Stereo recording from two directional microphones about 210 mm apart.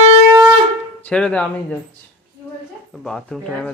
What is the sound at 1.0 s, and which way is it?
Speech, 5° left (ahead or behind).